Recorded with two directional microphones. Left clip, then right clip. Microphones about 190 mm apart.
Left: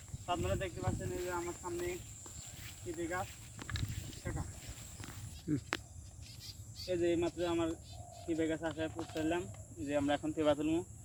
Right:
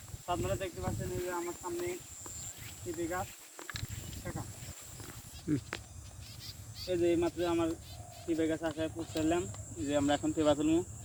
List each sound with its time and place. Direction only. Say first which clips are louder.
0.3 s speech: right 2 dB; centre (ahead or behind)
4.2 s a sound: right 2 dB; centre (ahead or behind)
5.5 s speech: right 3 dB; 5° right (ahead or behind)
6.8 s speech: right 3 dB; 5° left (ahead or behind)